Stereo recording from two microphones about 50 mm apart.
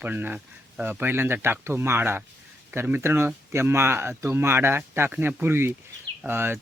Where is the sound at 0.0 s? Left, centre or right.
Right.